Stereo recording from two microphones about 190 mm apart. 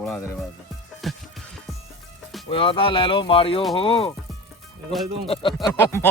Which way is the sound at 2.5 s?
25° left (ahead or behind).